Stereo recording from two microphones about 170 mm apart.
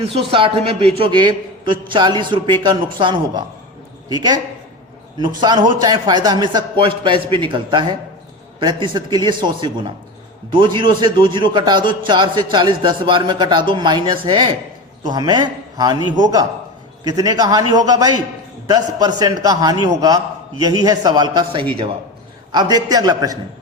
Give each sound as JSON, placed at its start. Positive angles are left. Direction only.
{"t": 0.3, "sound": "a man's voice", "side_deg": -30}
{"t": 5.4, "sound": "a man's voice", "side_deg": -25}